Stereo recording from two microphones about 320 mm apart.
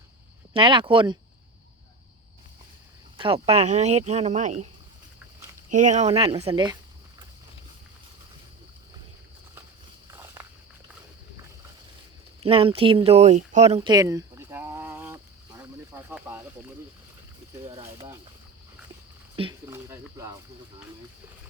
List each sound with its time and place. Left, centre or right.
0.5 s speech: centre
3.2 s speech: centre
5.7 s speech: right
10.1 s walk: centre
12.4 s speech: centre
15.9 s snake: centre
17.7 s speech: centre
19.4 s speech: centre